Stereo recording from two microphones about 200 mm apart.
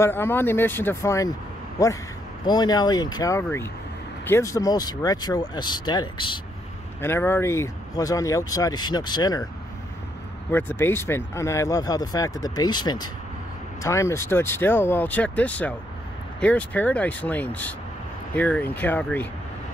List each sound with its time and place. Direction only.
0.0 s speech: 10° left (ahead or behind)
7.0 s speech: 10° left (ahead or behind)
10.5 s speech: 10° left (ahead or behind)